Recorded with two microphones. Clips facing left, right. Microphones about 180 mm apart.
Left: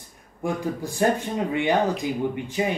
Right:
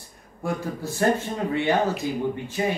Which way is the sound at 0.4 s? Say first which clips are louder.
Left 2 dB; 15° left (ahead or behind).